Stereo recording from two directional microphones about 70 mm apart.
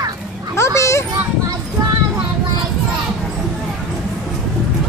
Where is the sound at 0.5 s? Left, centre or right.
Left.